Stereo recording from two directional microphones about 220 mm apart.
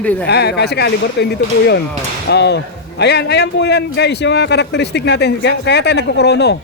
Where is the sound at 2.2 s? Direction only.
50° left (ahead or behind).